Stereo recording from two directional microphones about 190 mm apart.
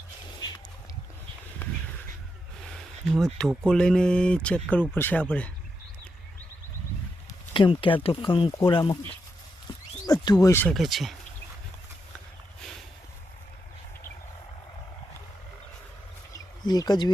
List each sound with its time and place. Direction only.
3.1 s speech: centre (ahead or behind)
7.5 s speech: 25° left (ahead or behind)
10.1 s speech: 20° left (ahead or behind)
10.8 s speech: centre (ahead or behind)
16.3 s a sound: 20° left (ahead or behind)